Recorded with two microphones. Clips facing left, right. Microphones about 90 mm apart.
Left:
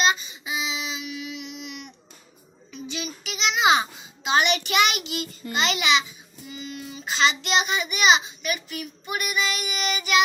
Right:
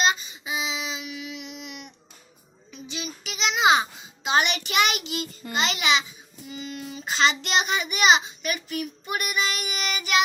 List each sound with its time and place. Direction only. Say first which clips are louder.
0.0 s a sound: left 1 dB; 35° right (ahead or behind)
2.8 s child singing: left 2 dB; 35° right (ahead or behind)
4.3 s a child's voice: left 1 dB; 30° right (ahead or behind)
4.6 s child singing: left 1 dB; 35° right (ahead or behind)
6.5 s child singing: right 1 dB; 45° right (ahead or behind)